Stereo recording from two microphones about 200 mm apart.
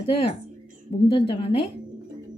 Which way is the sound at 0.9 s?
30° left (ahead or behind).